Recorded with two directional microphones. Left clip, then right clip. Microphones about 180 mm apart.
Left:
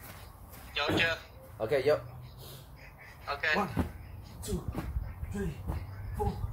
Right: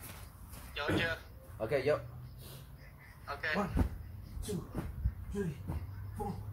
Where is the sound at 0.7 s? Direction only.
20° left (ahead or behind).